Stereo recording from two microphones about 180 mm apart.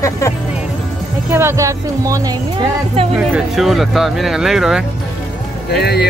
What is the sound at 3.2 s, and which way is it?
Speech, 5° right (ahead or behind).